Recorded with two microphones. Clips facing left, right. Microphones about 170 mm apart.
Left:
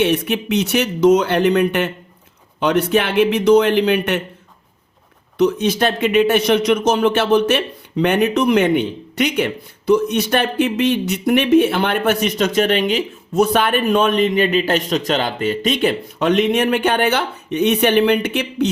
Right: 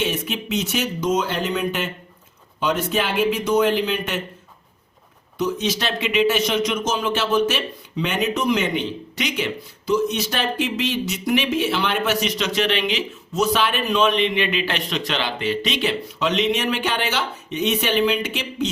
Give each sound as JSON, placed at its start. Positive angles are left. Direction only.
{"t": 0.0, "sound": "speech", "side_deg": 65}
{"t": 5.4, "sound": "speech", "side_deg": 60}